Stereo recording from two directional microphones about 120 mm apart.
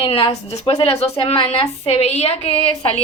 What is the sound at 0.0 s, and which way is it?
A woman's voice, 55° left (ahead or behind).